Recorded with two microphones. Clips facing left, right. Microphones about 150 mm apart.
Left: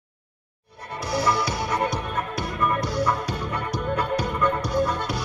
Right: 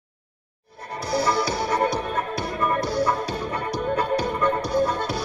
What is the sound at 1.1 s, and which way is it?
Music, 30° right (ahead or behind).